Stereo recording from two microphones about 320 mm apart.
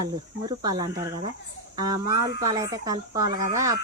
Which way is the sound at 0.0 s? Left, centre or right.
Centre.